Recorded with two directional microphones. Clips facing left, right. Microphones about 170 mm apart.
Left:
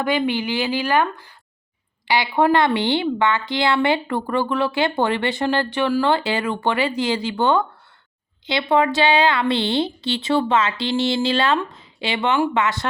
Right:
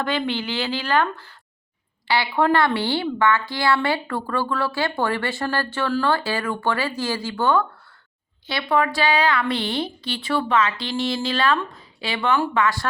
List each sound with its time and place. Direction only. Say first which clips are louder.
0.0 s a woman's voice: left 3 dB; 10° left (ahead or behind)